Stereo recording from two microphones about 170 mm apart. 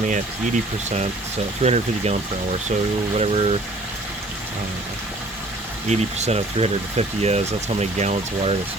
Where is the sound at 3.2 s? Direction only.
35° right (ahead or behind).